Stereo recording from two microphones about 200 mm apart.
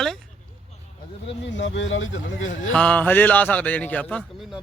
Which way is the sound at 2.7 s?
5° left (ahead or behind).